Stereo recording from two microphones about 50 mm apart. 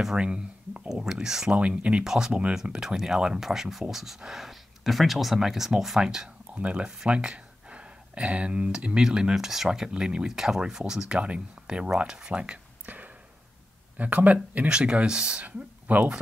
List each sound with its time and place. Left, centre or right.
0.0 s speech: centre
1.6 s speech: right
2.0 s speech: centre
6.0 s speech: centre
12.8 s a sound: right
13.9 s speech: right
14.7 s speech: centre
15.4 s speech: right